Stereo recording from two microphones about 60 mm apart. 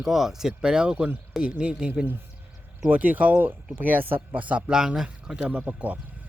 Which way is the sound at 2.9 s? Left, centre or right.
Right.